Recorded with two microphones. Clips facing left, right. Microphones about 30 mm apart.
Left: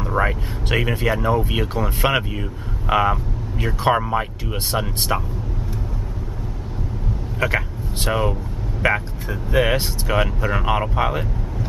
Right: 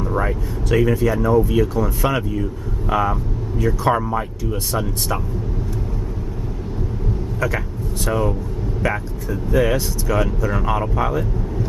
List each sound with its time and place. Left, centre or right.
0.2 s speech: left
7.3 s speech: left